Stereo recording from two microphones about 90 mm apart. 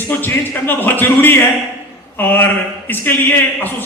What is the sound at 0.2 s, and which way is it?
Speech, 20° left (ahead or behind).